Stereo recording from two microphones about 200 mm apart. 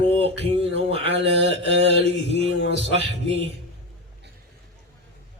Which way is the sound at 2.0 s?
60° left (ahead or behind).